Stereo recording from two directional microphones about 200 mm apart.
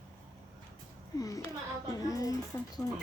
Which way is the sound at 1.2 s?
15° left (ahead or behind).